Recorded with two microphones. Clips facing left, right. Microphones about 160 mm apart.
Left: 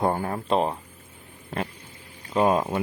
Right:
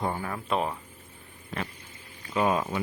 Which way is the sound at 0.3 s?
30° left (ahead or behind).